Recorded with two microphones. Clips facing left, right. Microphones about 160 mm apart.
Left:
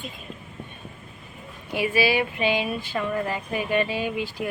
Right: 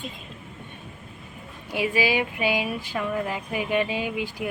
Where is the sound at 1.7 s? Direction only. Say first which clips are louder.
Left 1 dB; 15° right (ahead or behind).